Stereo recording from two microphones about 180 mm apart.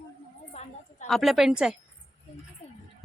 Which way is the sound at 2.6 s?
40° left (ahead or behind).